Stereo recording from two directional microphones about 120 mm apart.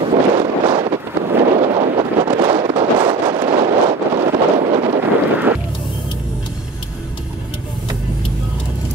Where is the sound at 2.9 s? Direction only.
40° right (ahead or behind).